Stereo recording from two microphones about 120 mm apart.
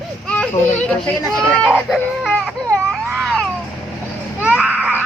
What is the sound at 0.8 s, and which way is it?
Speech, 10° left (ahead or behind).